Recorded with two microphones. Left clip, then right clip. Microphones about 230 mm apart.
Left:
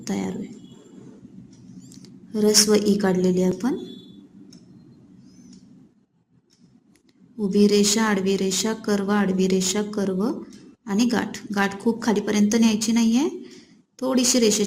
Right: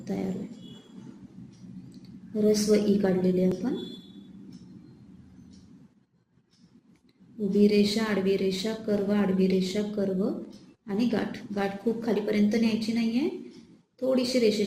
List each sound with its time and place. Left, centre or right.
0.0 s speech: left
2.0 s a woman's voice: left
7.3 s a woman's voice: left